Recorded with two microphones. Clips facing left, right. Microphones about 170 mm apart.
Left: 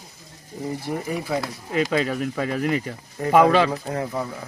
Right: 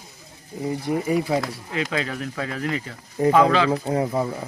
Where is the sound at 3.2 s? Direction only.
20° right (ahead or behind).